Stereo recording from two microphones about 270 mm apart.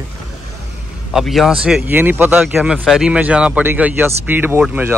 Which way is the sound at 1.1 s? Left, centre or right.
Centre.